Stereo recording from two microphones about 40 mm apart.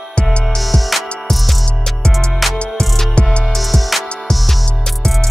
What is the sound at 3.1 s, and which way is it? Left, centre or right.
Music, left.